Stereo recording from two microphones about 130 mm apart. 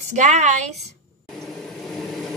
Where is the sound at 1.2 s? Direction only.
Centre (ahead or behind).